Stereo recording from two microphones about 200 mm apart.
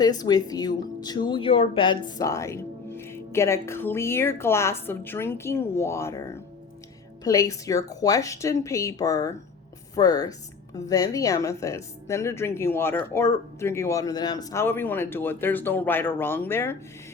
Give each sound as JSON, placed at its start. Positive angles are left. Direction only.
{"t": 0.0, "sound": "speech", "side_deg": 20}